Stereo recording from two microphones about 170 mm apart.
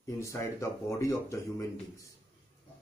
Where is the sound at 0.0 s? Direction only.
20° left (ahead or behind).